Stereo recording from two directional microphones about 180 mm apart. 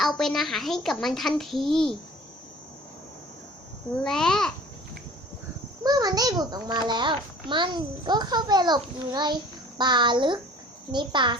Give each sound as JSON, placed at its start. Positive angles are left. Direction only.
{"t": 0.0, "sound": "a child's voice", "side_deg": 0}
{"t": 4.0, "sound": "a child's voice", "side_deg": 5}
{"t": 5.8, "sound": "a child's voice", "side_deg": -20}